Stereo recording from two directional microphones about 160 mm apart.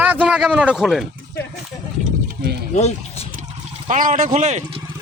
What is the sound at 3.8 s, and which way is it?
Speech, 50° right (ahead or behind).